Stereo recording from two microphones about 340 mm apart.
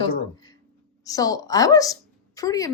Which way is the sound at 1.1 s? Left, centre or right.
Centre.